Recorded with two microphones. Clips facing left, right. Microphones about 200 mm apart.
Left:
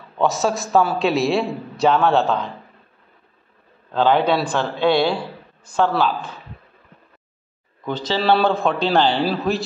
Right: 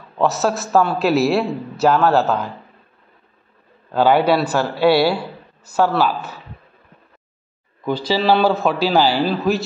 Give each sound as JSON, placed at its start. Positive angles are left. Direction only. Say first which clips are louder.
{"t": 0.2, "sound": "a man's voice", "louder": "right 1 dB", "side_deg": 0}
{"t": 3.9, "sound": "a man's voice", "louder": "right 2 dB", "side_deg": -10}
{"t": 7.8, "sound": "a man's voice", "louder": "right 3 dB", "side_deg": -10}